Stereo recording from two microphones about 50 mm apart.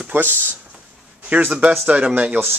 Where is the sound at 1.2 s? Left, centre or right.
Right.